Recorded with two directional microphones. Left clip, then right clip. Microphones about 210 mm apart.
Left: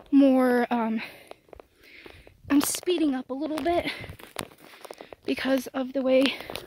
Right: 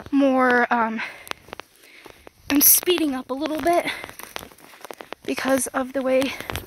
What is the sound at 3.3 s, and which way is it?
Speech, 10° right (ahead or behind).